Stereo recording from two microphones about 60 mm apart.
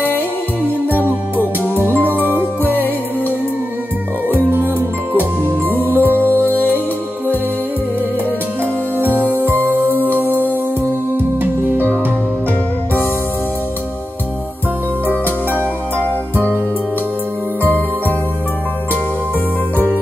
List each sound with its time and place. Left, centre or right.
1.0 s music: right
2.7 s music: left
4.3 s music: right
9.3 s music: right
9.8 s music: left
10.1 s music: right
11.7 s music: right